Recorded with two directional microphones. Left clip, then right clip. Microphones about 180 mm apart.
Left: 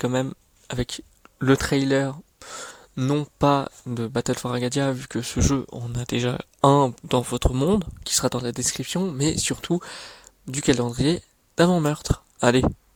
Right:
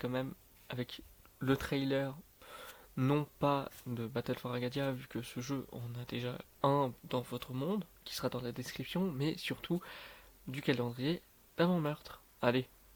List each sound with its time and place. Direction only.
0.0 s speech: 55° left (ahead or behind)
2.9 s speech: 30° left (ahead or behind)
3.3 s speech: 50° left (ahead or behind)